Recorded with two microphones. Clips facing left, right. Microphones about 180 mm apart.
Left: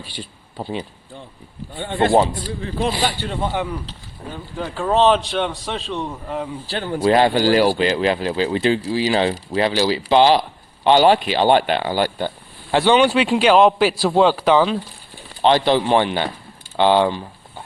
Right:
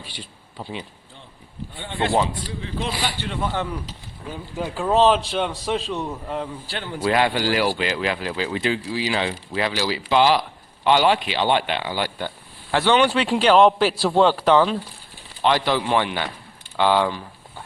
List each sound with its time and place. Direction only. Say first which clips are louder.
0.2 s a man's voice: left 7 dB; 40° left (ahead or behind)
4.3 s a man's voice: even; 10° right (ahead or behind)
6.9 s speech: left 5 dB; 35° left (ahead or behind)
12.7 s a man's voice: left 3 dB; 15° left (ahead or behind)
15.4 s a man's voice: left 5 dB; 30° left (ahead or behind)